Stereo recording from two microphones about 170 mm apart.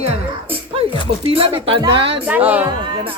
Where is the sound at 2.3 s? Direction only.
10° right (ahead or behind).